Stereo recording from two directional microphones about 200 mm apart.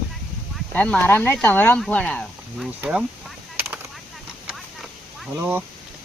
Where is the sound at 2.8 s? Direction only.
5° right (ahead or behind).